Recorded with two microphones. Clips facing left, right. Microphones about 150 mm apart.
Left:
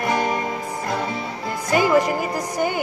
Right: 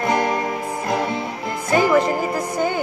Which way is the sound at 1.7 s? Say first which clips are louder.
Right 1 dB; 15° left (ahead or behind).